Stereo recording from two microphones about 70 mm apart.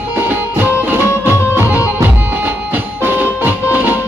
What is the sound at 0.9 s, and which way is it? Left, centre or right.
Music, right.